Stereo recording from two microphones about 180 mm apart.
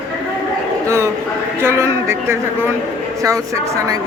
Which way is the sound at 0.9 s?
15° right (ahead or behind).